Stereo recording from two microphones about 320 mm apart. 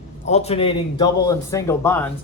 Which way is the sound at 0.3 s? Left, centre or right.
Centre.